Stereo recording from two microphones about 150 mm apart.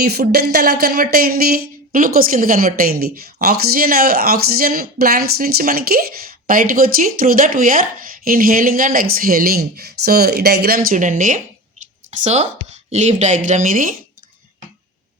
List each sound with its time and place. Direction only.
0.0 s speech: 90° right
6.5 s speech: 70° right (ahead or behind)
12.1 s speech: 50° right (ahead or behind)